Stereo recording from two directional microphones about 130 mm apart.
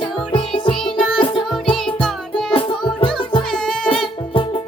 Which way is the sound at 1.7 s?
5° left (ahead or behind).